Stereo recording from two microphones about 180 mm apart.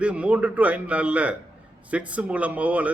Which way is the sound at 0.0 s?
5° right (ahead or behind).